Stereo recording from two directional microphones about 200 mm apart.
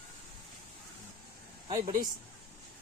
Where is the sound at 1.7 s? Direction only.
20° right (ahead or behind).